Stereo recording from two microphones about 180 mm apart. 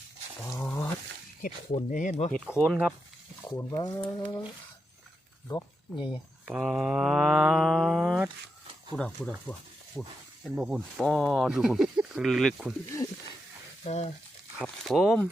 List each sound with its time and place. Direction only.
0.6 s a sound: 10° left (ahead or behind)
1.4 s speech: 50° left (ahead or behind)
2.5 s speech: 5° right (ahead or behind)
3.4 s speech: 15° left (ahead or behind)
5.5 s speech: 20° left (ahead or behind)
6.5 s speech: 5° right (ahead or behind)
10.4 s speech: 5° right (ahead or behind)
12.9 s speech: 15° left (ahead or behind)
13.8 s speech: 35° left (ahead or behind)
14.6 s speech: centre (ahead or behind)